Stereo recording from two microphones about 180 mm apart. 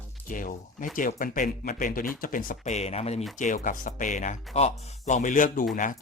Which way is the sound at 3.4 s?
45° left (ahead or behind).